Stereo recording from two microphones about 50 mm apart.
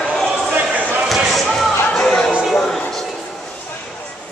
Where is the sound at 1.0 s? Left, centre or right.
Centre.